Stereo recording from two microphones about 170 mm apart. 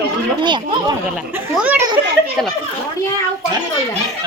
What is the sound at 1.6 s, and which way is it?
Speech, 10° right (ahead or behind).